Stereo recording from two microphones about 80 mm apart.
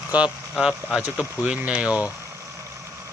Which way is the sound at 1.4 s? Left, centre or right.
Centre.